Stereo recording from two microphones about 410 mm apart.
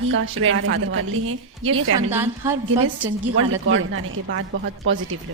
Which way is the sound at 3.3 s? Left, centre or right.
Right.